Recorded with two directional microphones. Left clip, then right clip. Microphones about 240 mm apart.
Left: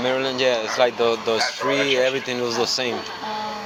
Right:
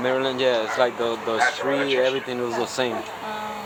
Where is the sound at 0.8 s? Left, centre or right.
Centre.